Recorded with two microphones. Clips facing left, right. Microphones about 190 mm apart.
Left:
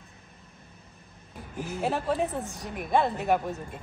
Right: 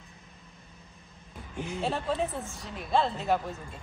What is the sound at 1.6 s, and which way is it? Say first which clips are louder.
A woman's voice: left 2 dB; 5° left (ahead or behind).